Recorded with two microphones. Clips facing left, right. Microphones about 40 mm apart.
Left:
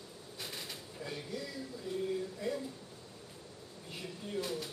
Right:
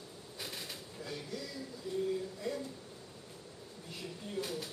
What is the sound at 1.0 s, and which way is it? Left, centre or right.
Speech, centre.